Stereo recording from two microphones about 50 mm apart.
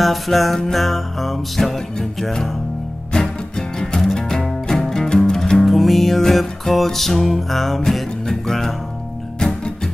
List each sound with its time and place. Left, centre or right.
0.0 s music: centre
5.7 s music: centre